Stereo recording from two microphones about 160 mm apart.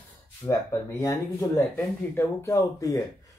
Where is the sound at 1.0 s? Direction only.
15° left (ahead or behind).